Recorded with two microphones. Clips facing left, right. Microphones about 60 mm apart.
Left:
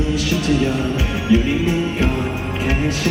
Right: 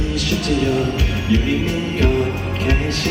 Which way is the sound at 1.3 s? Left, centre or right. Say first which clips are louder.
Left 3 dB; left.